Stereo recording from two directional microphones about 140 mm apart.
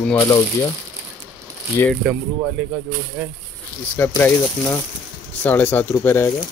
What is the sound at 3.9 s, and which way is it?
Speech, 15° left (ahead or behind).